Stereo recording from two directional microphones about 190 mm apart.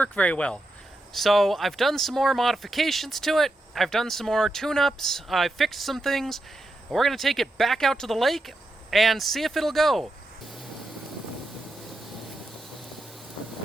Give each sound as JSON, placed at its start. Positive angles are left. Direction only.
{"t": 0.0, "sound": "speech", "side_deg": 5}